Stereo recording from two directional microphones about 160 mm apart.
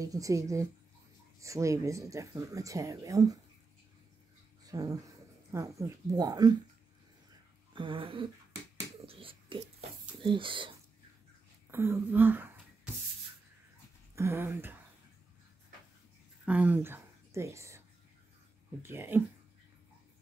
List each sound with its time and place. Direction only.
0.0 s speech: 20° right (ahead or behind)
4.6 s speech: 20° right (ahead or behind)
7.7 s a sound: 30° right (ahead or behind)
11.7 s a sound: 15° right (ahead or behind)
14.1 s speech: 15° right (ahead or behind)
16.4 s a woman's voice: 10° right (ahead or behind)